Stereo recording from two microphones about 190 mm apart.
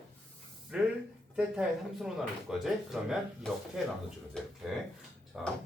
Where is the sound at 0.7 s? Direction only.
5° right (ahead or behind).